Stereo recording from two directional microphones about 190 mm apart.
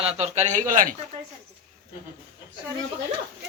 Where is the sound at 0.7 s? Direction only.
45° right (ahead or behind).